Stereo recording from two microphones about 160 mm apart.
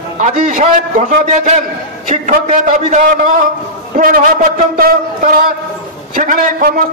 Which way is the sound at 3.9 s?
60° right (ahead or behind).